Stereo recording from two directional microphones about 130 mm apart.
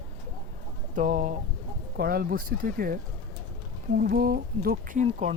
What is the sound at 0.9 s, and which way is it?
Speech, 70° right (ahead or behind).